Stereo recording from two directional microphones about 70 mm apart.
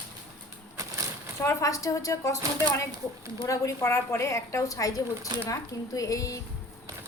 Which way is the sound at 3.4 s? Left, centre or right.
Left.